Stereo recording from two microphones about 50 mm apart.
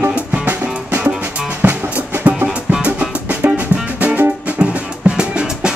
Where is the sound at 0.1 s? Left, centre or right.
Right.